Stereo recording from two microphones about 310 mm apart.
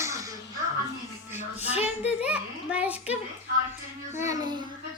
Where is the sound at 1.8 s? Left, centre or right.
Centre.